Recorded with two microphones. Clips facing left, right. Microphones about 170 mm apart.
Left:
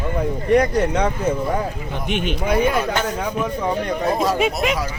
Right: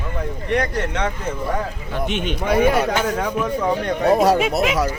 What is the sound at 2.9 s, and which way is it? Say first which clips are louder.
Speech: right 1 dB; 10° right (ahead or behind).